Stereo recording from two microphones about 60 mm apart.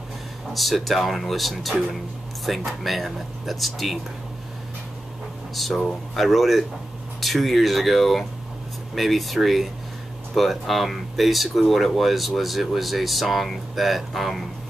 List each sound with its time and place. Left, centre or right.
0.5 s speech: centre
5.5 s speech: centre